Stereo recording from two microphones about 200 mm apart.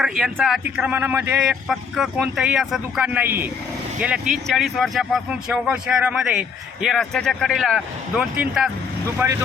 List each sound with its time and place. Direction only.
0.0 s a man's voice: centre (ahead or behind)